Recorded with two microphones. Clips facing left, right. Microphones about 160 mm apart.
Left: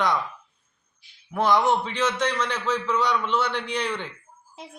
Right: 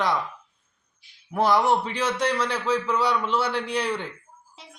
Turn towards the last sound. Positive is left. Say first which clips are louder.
# right 2 dB
turn(degrees=-10)  # may be behind; listen again after turning